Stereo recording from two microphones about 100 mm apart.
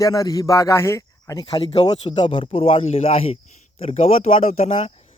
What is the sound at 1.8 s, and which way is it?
A man's voice, 55° left (ahead or behind).